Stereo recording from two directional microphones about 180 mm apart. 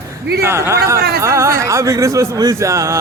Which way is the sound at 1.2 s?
15° right (ahead or behind).